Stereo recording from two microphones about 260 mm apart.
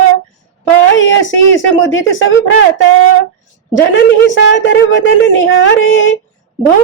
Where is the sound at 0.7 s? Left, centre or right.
Left.